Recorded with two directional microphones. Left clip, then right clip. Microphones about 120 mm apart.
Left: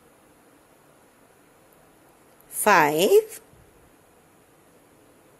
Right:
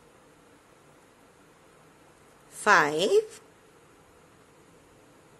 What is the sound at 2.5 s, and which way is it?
Speech, 45° left (ahead or behind).